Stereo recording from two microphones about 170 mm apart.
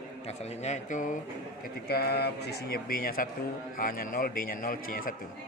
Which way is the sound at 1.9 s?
65° left (ahead or behind).